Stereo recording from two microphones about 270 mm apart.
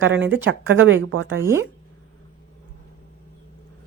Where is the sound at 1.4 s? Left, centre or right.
Centre.